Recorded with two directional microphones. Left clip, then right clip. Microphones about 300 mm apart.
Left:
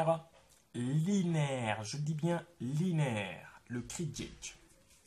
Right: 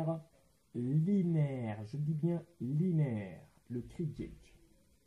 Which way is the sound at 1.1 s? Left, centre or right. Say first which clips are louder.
Left 3 dB; centre.